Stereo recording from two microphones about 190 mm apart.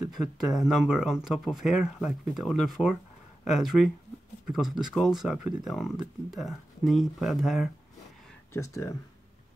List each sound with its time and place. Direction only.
0.5 s speech: centre (ahead or behind)
8.5 s speech: 15° left (ahead or behind)